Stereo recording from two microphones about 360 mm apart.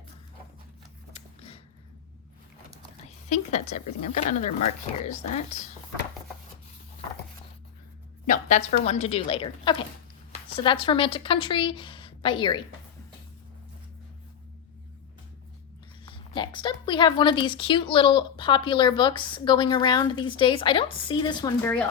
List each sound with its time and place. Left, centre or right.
1.1 s a sound: centre
3.2 s a woman's voice: centre
8.3 s a woman's voice: centre
16.0 s a woman's voice: centre